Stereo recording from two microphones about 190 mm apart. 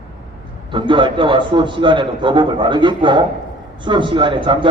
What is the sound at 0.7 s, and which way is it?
A man's voice, 25° right (ahead or behind).